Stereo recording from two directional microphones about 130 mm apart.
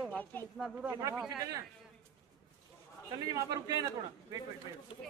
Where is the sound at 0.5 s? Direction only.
5° right (ahead or behind).